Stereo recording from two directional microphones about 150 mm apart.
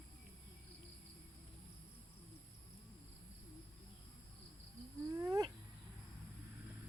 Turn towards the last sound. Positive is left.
turn(degrees=-25)  # may be behind; listen again after turning